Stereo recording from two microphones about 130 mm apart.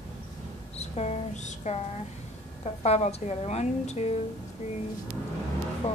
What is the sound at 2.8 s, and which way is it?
A woman's voice, 55° left (ahead or behind).